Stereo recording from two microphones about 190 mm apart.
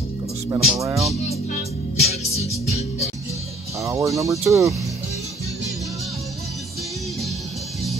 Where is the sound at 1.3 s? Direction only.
35° left (ahead or behind).